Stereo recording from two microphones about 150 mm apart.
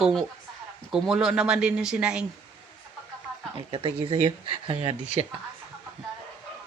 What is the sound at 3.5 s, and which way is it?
Speech, 35° right (ahead or behind).